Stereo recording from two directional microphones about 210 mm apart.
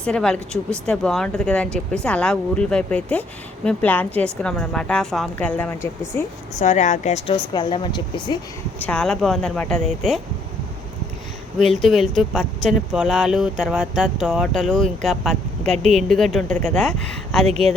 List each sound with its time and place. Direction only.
0.0 s speech: 5° left (ahead or behind)
6.6 s a woman's voice: 35° left (ahead or behind)
7.5 s speech: 20° left (ahead or behind)
8.8 s speech: 5° left (ahead or behind)
11.7 s speech: centre (ahead or behind)
17.4 s speech: 30° right (ahead or behind)